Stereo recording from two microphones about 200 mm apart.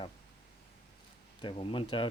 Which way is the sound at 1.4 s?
25° left (ahead or behind).